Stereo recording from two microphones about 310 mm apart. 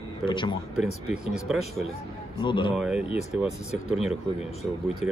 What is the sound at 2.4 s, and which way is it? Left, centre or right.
Speech, centre.